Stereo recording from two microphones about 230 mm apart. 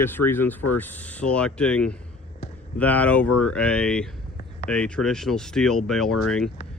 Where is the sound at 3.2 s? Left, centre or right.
Left.